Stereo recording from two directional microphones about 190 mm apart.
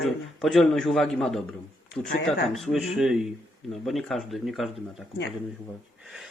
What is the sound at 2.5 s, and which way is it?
Speech, centre (ahead or behind).